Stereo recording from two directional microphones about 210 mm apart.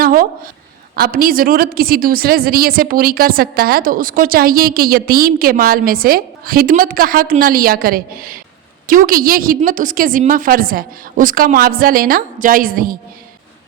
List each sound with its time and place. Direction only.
0.0 s a woman's voice: 40° right (ahead or behind)